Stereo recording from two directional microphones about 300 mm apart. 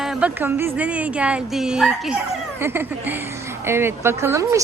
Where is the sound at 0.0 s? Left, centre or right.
Centre.